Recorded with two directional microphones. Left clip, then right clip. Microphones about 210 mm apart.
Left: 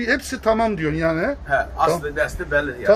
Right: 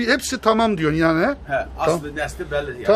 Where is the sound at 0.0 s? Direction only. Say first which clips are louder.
Right 2 dB; 25° right (ahead or behind).